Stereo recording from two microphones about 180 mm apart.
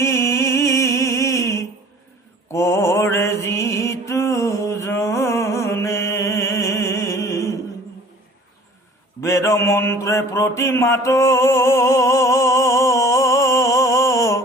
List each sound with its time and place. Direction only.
0.0 s a sound: 15° left (ahead or behind)
2.5 s mantra: 15° left (ahead or behind)
9.2 s mantra: 15° left (ahead or behind)